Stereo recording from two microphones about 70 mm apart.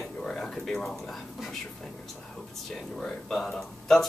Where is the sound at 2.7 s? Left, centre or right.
Centre.